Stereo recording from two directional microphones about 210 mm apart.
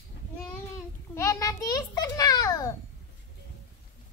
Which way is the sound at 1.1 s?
15° left (ahead or behind).